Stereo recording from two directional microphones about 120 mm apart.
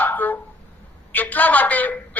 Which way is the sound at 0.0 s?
15° left (ahead or behind).